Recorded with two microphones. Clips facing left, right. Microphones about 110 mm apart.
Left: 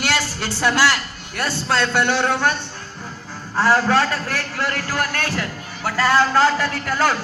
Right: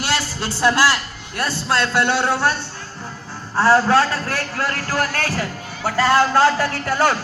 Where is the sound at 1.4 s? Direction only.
10° right (ahead or behind).